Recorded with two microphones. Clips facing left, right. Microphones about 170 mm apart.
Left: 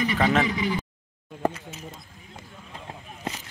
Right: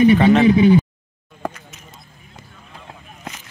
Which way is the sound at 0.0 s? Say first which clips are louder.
Right 12 dB; 20° right (ahead or behind).